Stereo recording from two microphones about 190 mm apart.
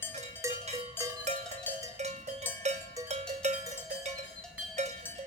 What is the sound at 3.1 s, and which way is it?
Cowbell, 35° right (ahead or behind).